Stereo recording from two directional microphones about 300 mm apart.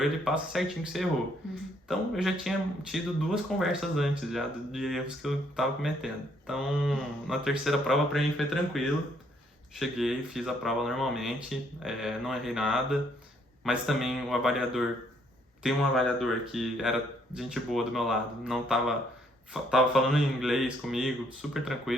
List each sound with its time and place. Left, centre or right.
0.0 s speech: centre